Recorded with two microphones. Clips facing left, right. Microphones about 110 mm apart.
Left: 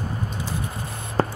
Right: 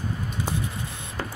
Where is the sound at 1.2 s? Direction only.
45° left (ahead or behind).